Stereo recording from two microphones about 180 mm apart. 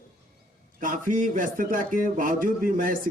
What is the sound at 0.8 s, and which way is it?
Speech, 45° right (ahead or behind).